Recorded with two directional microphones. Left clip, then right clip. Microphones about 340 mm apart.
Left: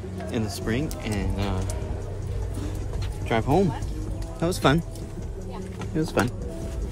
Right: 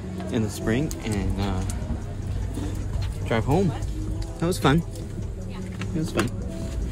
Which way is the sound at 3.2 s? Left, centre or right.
Centre.